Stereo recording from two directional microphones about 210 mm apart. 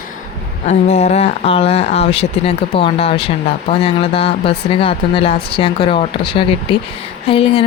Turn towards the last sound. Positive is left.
turn(degrees=25)  # may be behind; listen again after turning